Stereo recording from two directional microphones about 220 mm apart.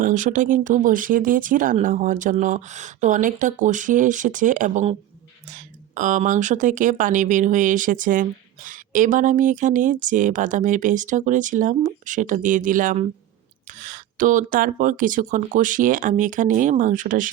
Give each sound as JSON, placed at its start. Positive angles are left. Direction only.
{"t": 0.0, "sound": "speech", "side_deg": -35}